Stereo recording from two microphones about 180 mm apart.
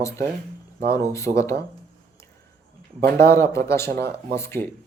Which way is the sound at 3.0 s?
60° right (ahead or behind).